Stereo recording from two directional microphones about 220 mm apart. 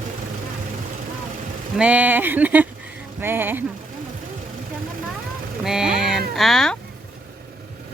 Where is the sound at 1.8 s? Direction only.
5° right (ahead or behind).